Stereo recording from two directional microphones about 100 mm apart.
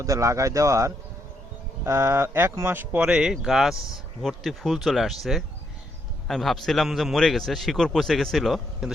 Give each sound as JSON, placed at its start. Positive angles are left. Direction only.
{"t": 0.0, "sound": "a man's voice", "side_deg": -35}
{"t": 6.2, "sound": "a man's voice", "side_deg": 0}